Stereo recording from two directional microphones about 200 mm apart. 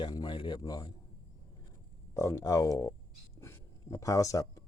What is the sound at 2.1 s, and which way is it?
Speech, 15° left (ahead or behind).